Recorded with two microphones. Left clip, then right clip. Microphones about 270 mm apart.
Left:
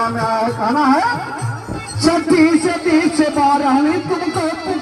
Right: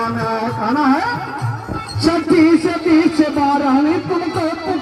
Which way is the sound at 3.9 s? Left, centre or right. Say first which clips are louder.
Even; centre.